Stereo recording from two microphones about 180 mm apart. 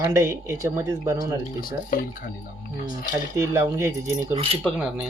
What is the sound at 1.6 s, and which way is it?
Speech, 50° left (ahead or behind).